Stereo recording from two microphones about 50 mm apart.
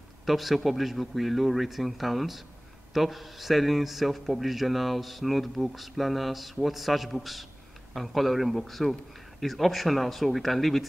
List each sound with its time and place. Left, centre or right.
0.2 s a man's voice: centre